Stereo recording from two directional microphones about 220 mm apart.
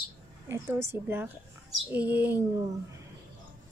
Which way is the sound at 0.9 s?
10° right (ahead or behind).